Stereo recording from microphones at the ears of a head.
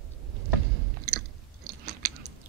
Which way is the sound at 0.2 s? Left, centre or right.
Right.